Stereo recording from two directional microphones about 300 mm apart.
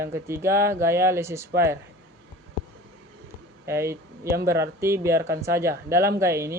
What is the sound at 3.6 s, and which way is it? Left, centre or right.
Speech, centre.